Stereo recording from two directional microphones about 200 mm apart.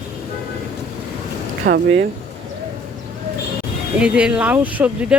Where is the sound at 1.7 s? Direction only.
60° right (ahead or behind).